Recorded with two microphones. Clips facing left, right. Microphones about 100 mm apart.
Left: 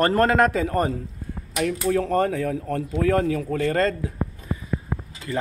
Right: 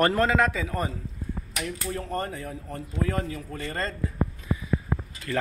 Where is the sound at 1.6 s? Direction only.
85° left.